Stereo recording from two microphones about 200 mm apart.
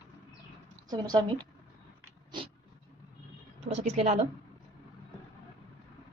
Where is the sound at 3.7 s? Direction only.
40° right (ahead or behind).